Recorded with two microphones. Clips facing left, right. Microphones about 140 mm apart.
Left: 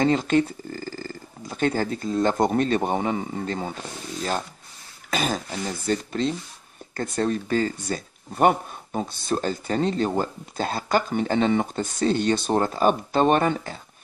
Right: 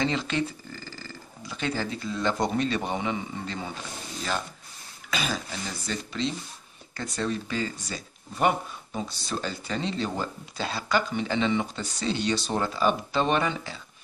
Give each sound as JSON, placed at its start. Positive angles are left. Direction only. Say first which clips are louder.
{"t": 0.0, "sound": "speech", "louder": "left 7 dB", "side_deg": 45}
{"t": 5.1, "sound": "speech", "louder": "left 5 dB", "side_deg": 45}